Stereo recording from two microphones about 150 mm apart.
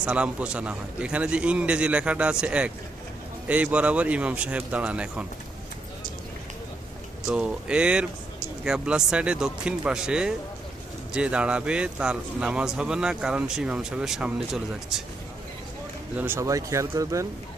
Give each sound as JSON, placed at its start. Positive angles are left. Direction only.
{"t": 0.0, "sound": "a man's voice", "side_deg": -10}
{"t": 7.3, "sound": "a man's voice", "side_deg": -5}
{"t": 16.1, "sound": "speech", "side_deg": -15}